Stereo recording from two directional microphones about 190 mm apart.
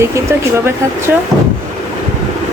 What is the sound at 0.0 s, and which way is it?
A woman's voice, 15° right (ahead or behind).